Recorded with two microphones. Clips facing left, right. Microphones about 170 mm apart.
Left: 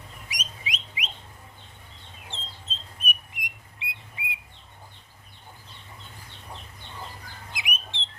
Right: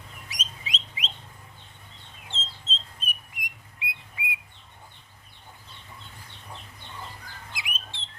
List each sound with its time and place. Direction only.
0.3 s bird: 15° left (ahead or behind)
2.3 s chicken: 15° left (ahead or behind)
3.0 s a sound: 20° left (ahead or behind)
4.2 s bird: 25° left (ahead or behind)
7.5 s bird: 20° left (ahead or behind)